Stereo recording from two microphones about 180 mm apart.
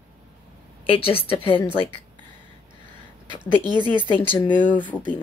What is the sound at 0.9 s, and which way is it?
Speech, 30° left (ahead or behind).